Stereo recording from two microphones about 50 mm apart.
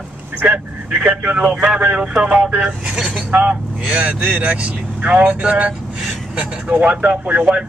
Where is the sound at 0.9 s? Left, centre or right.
Centre.